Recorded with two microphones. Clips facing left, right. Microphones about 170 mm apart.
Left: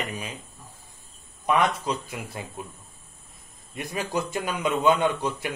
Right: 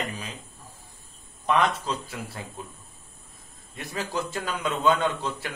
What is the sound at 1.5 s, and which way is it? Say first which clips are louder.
Speech: left 1 dB; 15° left (ahead or behind).